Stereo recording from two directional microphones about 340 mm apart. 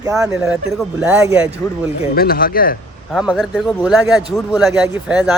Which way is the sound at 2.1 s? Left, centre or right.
Left.